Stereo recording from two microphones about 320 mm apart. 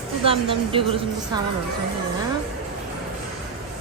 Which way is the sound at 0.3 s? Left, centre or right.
Centre.